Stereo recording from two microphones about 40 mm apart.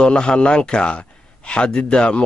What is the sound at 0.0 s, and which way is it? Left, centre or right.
Speech, left.